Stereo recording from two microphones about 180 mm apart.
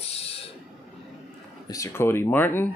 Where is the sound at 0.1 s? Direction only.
35° left (ahead or behind).